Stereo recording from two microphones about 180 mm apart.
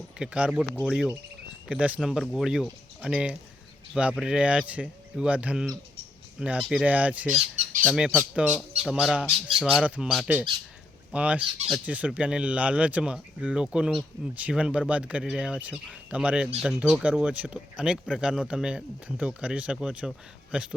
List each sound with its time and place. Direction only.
0.2 s speech: 5° right (ahead or behind)
7.3 s squawk: 45° right (ahead or behind)
7.9 s speech: 5° right (ahead or behind)